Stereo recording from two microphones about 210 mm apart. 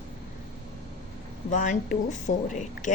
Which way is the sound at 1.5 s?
35° left (ahead or behind).